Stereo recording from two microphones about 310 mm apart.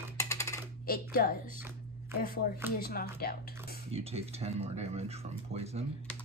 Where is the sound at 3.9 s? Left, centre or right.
Centre.